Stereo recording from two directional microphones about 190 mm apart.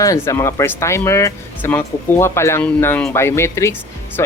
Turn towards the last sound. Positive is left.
turn(degrees=15)  # may be behind; listen again after turning